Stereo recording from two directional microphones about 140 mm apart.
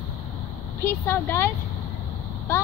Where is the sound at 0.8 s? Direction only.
15° left (ahead or behind).